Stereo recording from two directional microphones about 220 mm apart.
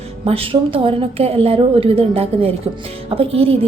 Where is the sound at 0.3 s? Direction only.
25° right (ahead or behind).